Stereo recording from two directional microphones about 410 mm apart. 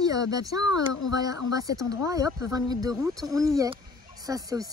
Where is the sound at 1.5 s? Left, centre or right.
Centre.